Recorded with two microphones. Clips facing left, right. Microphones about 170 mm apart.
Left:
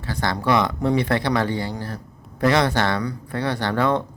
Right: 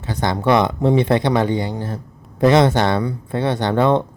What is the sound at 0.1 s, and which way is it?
Speech, 20° right (ahead or behind).